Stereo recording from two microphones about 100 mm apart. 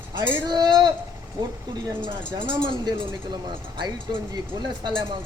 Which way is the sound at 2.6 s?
55° right (ahead or behind).